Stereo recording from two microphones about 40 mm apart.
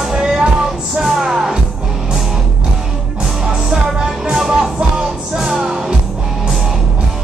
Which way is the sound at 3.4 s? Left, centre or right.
Centre.